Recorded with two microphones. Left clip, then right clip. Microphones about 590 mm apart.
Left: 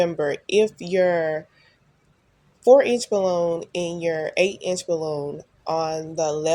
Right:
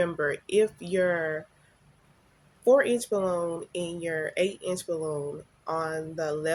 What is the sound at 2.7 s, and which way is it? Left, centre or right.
Speech, right.